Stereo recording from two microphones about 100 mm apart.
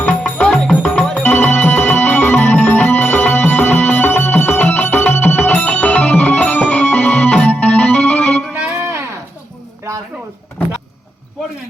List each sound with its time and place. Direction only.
0.1 s music: 5° left (ahead or behind)
1.2 s music: 20° left (ahead or behind)
8.5 s music: 15° right (ahead or behind)